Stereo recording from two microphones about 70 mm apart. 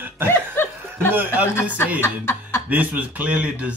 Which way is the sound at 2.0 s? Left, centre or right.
Left.